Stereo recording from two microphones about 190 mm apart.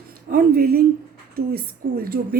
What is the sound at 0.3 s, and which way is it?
A woman's voice, 50° right (ahead or behind).